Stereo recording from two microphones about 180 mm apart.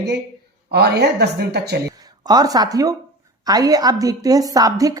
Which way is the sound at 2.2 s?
20° right (ahead or behind).